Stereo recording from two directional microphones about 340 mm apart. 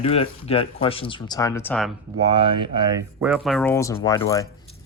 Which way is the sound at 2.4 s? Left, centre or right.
Centre.